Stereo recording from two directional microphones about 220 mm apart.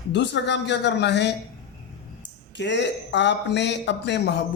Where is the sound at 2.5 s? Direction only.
55° left (ahead or behind).